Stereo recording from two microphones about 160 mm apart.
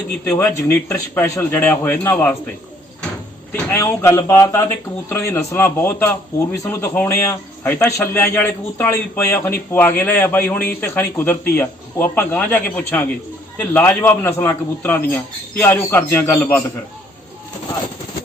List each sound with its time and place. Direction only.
0.3 s a man's voice: 10° left (ahead or behind)
3.5 s a man's voice: 10° left (ahead or behind)